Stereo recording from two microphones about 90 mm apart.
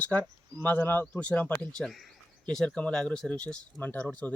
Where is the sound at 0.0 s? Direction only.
15° left (ahead or behind).